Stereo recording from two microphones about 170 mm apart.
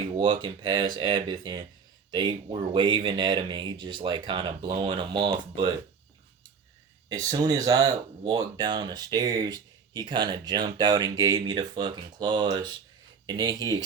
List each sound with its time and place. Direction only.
0.2 s speech: 25° right (ahead or behind)
7.1 s speech: 20° right (ahead or behind)